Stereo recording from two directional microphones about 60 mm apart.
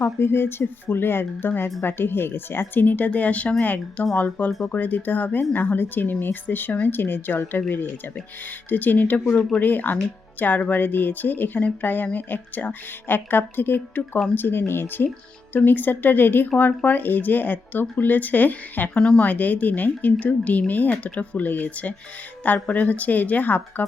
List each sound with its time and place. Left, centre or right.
0.0 s speech: left
9.3 s speech: centre
9.6 s speech: left
18.9 s speech: centre
19.2 s speech: left